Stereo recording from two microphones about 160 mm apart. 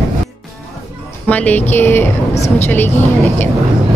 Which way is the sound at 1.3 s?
10° left (ahead or behind).